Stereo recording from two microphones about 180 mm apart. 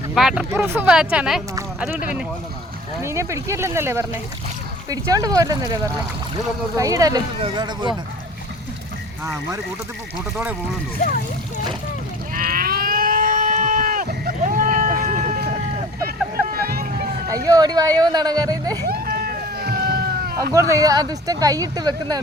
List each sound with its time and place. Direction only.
0.1 s speech: centre (ahead or behind)
3.0 s speech: 15° right (ahead or behind)
9.2 s speech: 15° right (ahead or behind)
12.3 s sheep: 55° right (ahead or behind)
16.0 s vehicle: 55° right (ahead or behind)
17.2 s speech: 20° right (ahead or behind)
18.9 s a sound: 60° right (ahead or behind)
20.5 s speech: 20° right (ahead or behind)